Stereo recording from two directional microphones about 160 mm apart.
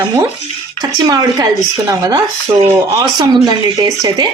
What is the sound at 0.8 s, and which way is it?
Speech, 25° right (ahead or behind).